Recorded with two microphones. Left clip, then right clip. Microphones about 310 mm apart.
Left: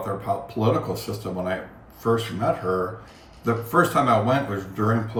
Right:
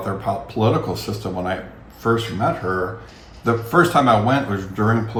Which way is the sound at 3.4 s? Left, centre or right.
Centre.